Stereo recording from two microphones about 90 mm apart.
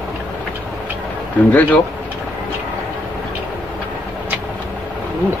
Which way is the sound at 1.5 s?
15° left (ahead or behind).